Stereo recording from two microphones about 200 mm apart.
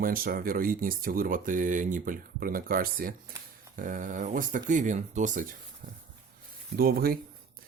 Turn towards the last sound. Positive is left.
turn(degrees=-50)  # may be behind; listen again after turning